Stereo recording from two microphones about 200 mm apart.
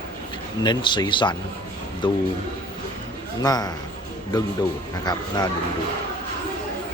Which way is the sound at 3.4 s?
20° left (ahead or behind).